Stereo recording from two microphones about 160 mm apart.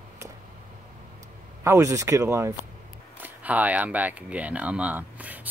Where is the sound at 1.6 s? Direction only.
20° right (ahead or behind).